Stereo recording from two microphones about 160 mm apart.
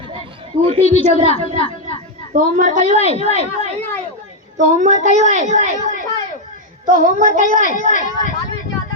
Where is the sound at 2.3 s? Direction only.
55° right (ahead or behind).